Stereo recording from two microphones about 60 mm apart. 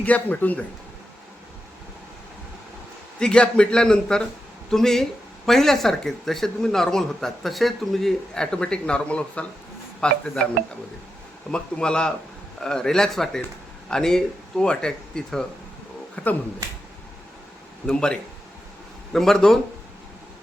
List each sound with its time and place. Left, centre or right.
0.0 s speech: left
3.2 s speech: centre
11.5 s speech: centre
17.8 s speech: centre